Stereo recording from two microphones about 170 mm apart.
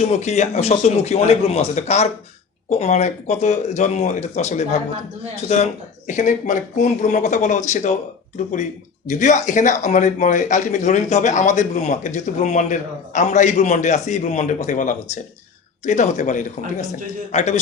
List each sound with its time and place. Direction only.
0.0 s speech: 40° left (ahead or behind)
6.1 s speech: 45° left (ahead or behind)
9.0 s speech: 45° left (ahead or behind)